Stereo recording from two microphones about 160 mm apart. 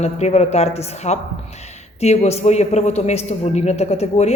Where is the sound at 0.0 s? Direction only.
45° left (ahead or behind).